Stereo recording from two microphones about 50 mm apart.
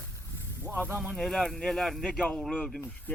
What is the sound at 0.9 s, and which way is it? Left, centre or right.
Speech, centre.